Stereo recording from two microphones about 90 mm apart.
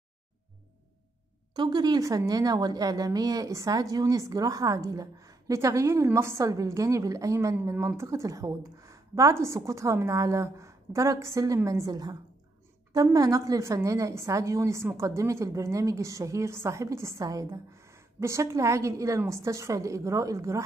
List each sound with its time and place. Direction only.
1.5 s a woman's voice: 50° right (ahead or behind)
17.7 s a woman's voice: 30° right (ahead or behind)